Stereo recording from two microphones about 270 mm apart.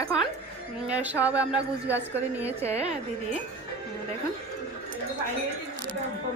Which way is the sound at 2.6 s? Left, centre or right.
Right.